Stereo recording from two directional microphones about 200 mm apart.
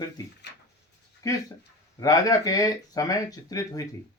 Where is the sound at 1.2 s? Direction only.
15° left (ahead or behind).